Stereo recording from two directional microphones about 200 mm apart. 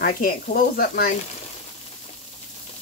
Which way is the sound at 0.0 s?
45° left (ahead or behind).